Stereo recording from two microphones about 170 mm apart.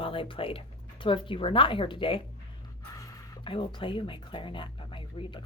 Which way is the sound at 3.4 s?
30° left (ahead or behind).